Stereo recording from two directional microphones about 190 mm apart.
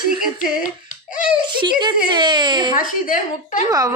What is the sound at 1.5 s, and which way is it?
A woman's voice, 25° right (ahead or behind).